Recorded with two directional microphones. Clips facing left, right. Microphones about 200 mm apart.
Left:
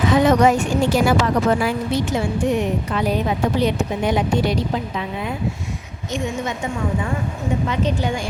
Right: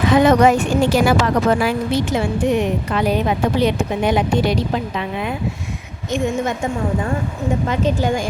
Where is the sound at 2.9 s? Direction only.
70° right (ahead or behind).